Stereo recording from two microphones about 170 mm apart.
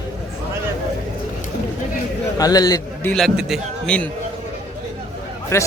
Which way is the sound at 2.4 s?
20° left (ahead or behind).